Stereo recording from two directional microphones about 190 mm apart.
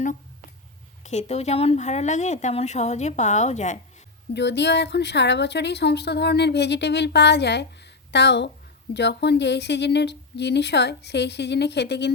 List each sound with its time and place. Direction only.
1.0 s speech: 35° left (ahead or behind)
4.4 s speech: 65° left (ahead or behind)